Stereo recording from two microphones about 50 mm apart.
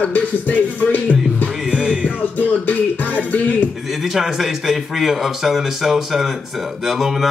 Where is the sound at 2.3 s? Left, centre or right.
Left.